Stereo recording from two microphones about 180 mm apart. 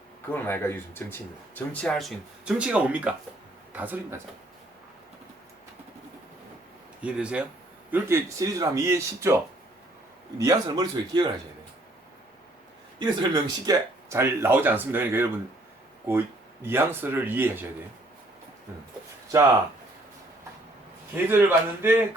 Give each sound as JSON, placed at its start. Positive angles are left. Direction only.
{"t": 0.3, "sound": "speech", "side_deg": 10}
{"t": 7.0, "sound": "a man's voice", "side_deg": -5}
{"t": 13.0, "sound": "speech", "side_deg": -25}
{"t": 16.6, "sound": "speech", "side_deg": -10}
{"t": 21.2, "sound": "speech", "side_deg": -10}